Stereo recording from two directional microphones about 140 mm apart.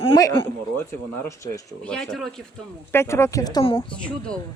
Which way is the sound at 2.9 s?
20° left (ahead or behind).